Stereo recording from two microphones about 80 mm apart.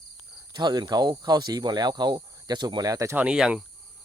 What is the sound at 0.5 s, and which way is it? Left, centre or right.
Speech, right.